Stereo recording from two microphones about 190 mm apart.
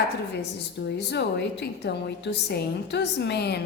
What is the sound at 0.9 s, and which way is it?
A woman's voice, 60° left (ahead or behind).